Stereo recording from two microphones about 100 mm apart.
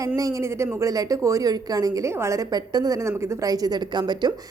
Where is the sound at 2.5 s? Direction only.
40° right (ahead or behind).